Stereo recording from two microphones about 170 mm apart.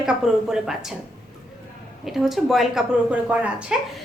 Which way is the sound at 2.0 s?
Centre (ahead or behind).